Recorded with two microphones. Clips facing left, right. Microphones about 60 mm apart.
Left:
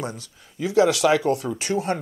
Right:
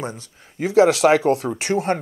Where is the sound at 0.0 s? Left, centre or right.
Right.